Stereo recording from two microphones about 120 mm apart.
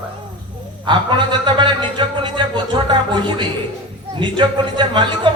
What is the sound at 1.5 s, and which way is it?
A man's voice, 40° right (ahead or behind).